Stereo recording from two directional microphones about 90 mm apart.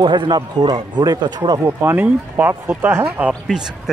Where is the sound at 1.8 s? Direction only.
20° right (ahead or behind).